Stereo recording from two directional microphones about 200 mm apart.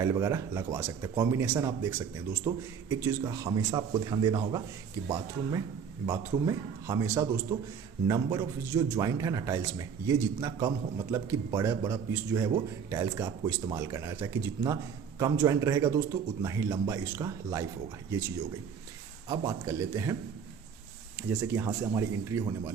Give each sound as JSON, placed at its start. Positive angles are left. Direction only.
{"t": 0.0, "sound": "a man's voice", "side_deg": -15}
{"t": 19.3, "sound": "a man's voice", "side_deg": -15}
{"t": 21.2, "sound": "a man's voice", "side_deg": -10}